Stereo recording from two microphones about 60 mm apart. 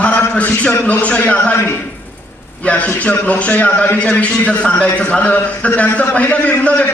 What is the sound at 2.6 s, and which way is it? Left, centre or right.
A man's voice, left.